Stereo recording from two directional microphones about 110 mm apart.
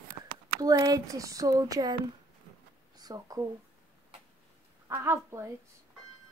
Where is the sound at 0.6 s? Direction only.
35° right (ahead or behind).